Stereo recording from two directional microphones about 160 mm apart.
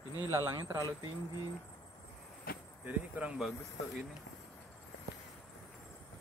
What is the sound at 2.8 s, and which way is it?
Speech, 10° right (ahead or behind).